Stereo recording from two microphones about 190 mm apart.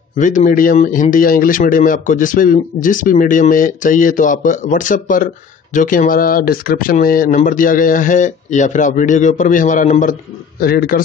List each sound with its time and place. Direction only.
0.2 s speech: 40° left (ahead or behind)
10.6 s speech: 50° left (ahead or behind)